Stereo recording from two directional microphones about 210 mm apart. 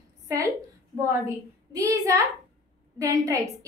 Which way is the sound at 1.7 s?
15° right (ahead or behind).